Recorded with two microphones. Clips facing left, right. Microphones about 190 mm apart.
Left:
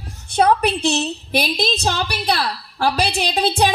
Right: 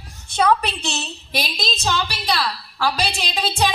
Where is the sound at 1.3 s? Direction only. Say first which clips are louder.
Left 6 dB; 65° left (ahead or behind).